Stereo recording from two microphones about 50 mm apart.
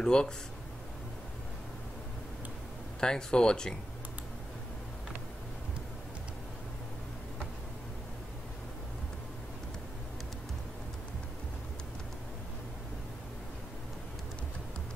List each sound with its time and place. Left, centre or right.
0.0 s speech: centre
3.0 s speech: centre